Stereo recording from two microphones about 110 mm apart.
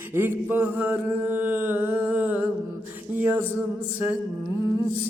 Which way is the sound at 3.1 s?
15° right (ahead or behind).